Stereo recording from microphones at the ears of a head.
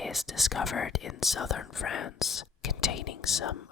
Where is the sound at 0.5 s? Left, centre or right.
Left.